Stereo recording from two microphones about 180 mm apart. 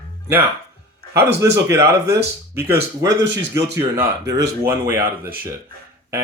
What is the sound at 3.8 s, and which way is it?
Speech, 20° right (ahead or behind).